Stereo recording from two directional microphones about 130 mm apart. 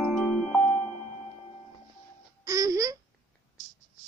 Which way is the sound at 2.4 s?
25° right (ahead or behind).